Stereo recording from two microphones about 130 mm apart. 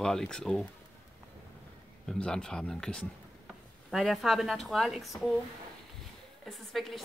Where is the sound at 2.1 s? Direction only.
5° left (ahead or behind).